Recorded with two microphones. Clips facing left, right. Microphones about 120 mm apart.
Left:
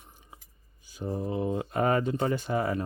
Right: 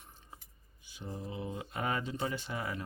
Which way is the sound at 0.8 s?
40° left (ahead or behind).